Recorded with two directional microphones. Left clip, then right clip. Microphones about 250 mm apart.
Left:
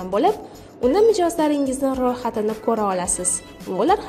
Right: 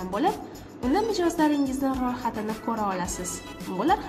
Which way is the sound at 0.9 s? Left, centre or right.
Left.